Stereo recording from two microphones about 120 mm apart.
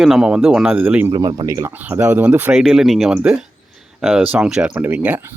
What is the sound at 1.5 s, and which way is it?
Speech, 25° right (ahead or behind).